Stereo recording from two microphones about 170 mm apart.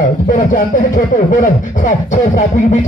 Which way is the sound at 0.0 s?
50° left (ahead or behind).